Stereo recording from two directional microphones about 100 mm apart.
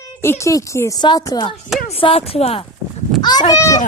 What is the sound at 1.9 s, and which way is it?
Speech, 75° left (ahead or behind).